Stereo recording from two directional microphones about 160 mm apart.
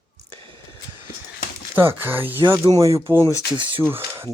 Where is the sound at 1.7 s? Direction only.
15° right (ahead or behind).